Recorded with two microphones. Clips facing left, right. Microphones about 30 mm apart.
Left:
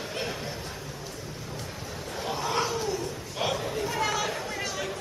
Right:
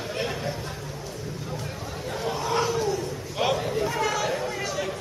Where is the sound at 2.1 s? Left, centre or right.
Centre.